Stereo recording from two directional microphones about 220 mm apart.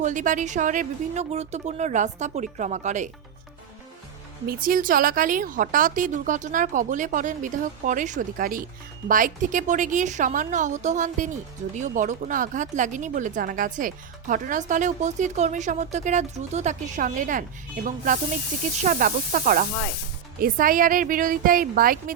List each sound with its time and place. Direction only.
0.0 s speech: 35° right (ahead or behind)
4.4 s speech: 40° right (ahead or behind)